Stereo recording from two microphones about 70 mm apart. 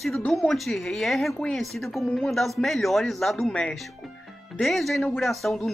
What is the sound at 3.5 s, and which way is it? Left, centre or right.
Speech, centre.